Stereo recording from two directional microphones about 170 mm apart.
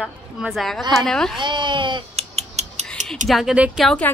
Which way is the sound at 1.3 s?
25° right (ahead or behind).